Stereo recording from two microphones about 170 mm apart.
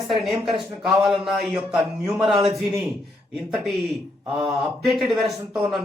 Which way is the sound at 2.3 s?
30° right (ahead or behind).